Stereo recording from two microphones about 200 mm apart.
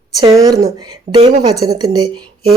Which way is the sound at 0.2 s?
20° right (ahead or behind).